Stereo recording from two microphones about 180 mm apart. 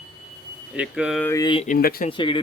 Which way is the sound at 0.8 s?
5° right (ahead or behind).